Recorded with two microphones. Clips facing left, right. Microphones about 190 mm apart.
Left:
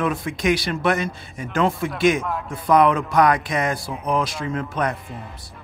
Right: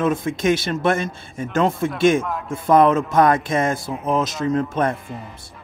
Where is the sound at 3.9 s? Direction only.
Centre (ahead or behind).